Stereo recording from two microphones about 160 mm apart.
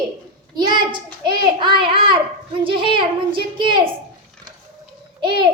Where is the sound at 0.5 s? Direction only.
25° right (ahead or behind).